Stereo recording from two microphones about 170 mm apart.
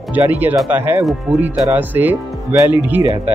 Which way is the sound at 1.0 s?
Centre (ahead or behind).